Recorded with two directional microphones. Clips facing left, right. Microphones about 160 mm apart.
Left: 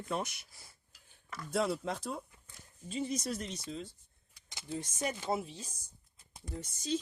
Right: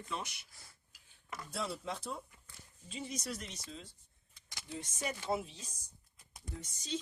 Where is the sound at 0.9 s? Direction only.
10° right (ahead or behind).